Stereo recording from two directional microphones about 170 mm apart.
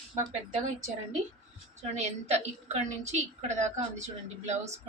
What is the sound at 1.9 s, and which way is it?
A woman's voice, 40° right (ahead or behind).